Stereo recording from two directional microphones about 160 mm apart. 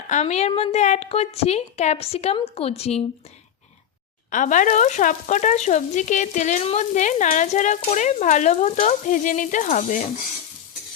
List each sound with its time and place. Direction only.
0.1 s a woman's voice: 45° left (ahead or behind)
4.3 s speech: 55° left (ahead or behind)